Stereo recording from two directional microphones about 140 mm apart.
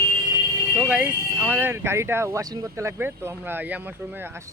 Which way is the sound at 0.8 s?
10° right (ahead or behind).